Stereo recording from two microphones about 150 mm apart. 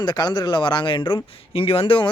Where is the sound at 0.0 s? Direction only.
30° left (ahead or behind).